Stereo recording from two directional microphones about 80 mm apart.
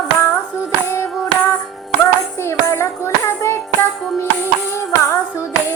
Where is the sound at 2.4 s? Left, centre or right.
Left.